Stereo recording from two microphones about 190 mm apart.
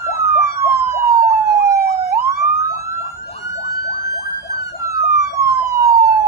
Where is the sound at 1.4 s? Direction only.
55° right (ahead or behind).